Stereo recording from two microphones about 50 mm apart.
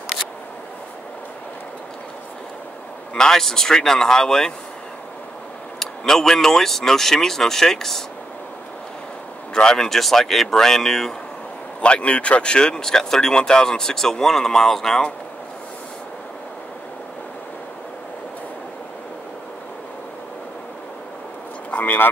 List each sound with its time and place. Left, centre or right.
3.2 s speech: centre
5.8 s speech: centre
9.5 s speech: centre
11.8 s speech: left; by 15.0 s centre
21.6 s vehicle: left